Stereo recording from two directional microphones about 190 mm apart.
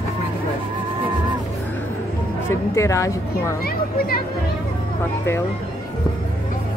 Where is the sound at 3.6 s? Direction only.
50° left (ahead or behind).